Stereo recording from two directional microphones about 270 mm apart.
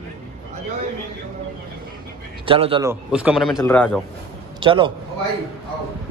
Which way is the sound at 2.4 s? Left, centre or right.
Centre.